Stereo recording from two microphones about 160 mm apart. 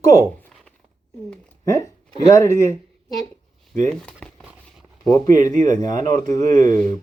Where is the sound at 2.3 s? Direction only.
15° left (ahead or behind).